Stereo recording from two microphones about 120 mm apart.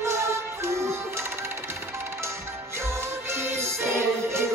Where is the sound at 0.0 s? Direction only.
20° right (ahead or behind).